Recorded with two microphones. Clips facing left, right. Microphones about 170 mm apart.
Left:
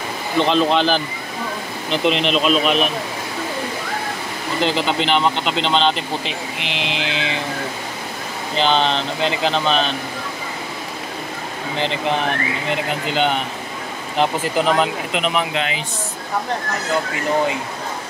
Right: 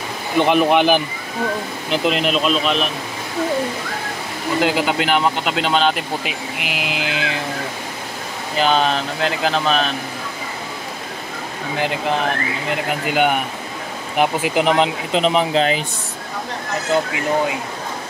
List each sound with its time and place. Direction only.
0.4 s speech: 15° right (ahead or behind)
1.9 s speech: 5° right (ahead or behind)
4.6 s speech: 10° right (ahead or behind)
8.5 s speech: 5° right (ahead or behind)
13.0 s speech: 10° right (ahead or behind)
15.1 s speech: 35° right (ahead or behind)